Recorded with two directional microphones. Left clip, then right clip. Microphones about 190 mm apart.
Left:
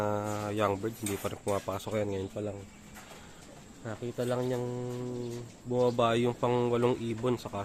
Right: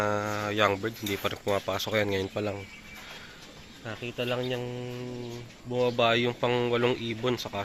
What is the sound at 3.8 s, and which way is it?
Speech, 20° left (ahead or behind).